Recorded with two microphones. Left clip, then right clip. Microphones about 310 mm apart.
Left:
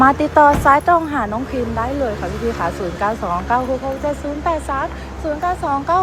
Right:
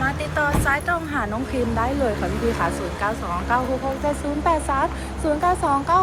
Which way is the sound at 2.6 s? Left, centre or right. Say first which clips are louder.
Left 3 dB; centre.